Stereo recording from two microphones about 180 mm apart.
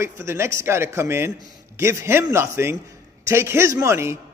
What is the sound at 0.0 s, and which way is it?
A man's voice, 15° right (ahead or behind).